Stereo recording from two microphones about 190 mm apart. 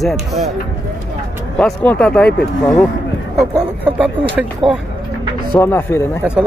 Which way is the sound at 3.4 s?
5° right (ahead or behind).